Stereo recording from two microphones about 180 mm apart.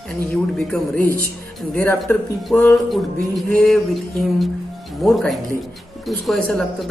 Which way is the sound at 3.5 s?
Centre (ahead or behind).